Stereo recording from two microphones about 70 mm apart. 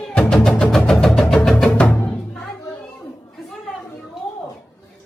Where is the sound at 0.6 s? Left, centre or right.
Centre.